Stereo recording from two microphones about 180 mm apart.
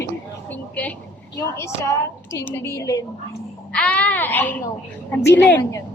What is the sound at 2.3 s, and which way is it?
Speech, 15° left (ahead or behind).